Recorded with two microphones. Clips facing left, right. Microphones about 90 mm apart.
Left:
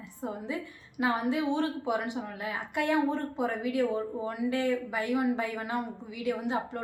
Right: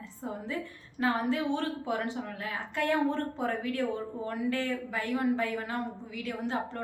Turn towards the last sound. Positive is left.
turn(degrees=15)  # may be behind; listen again after turning